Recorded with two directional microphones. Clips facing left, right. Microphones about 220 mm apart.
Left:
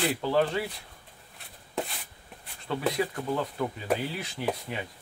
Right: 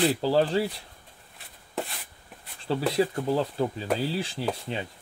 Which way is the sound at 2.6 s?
30° right (ahead or behind).